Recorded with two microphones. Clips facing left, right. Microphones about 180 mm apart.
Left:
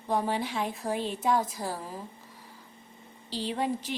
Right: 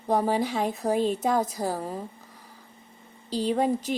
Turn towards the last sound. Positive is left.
turn(degrees=-40)  # may be behind; listen again after turning